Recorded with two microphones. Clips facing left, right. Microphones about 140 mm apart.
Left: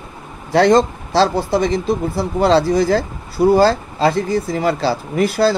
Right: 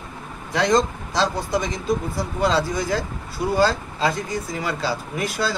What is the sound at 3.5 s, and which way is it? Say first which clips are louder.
Speech: left 6 dB; 30° left (ahead or behind).